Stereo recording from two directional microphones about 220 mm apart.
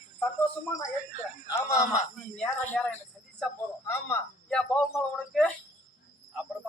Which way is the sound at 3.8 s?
10° left (ahead or behind).